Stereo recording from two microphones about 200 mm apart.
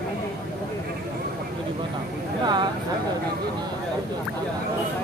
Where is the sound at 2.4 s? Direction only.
20° right (ahead or behind).